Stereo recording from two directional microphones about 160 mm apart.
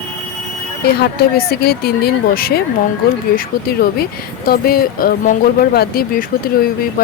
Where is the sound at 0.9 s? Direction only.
80° left.